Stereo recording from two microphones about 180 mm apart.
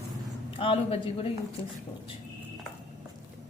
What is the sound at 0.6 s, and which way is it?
Speech, 30° left (ahead or behind).